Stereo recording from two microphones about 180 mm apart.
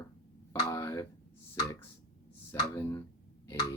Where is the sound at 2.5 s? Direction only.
15° left (ahead or behind).